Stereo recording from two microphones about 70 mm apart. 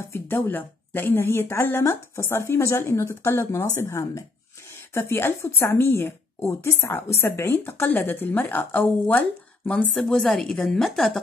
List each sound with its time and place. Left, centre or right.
0.0 s a woman's voice: left
9.9 s a woman's voice: centre